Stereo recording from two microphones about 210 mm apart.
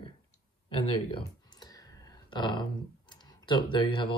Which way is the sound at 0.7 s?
20° left (ahead or behind).